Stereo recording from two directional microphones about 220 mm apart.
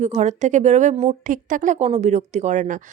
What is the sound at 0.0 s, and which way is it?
A woman's voice, 30° right (ahead or behind).